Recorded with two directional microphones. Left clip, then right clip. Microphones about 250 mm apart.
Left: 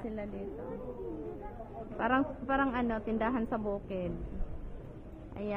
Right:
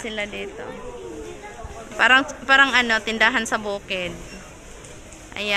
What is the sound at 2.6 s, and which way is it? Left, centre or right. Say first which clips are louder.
A woman's voice: right 16 dB; centre.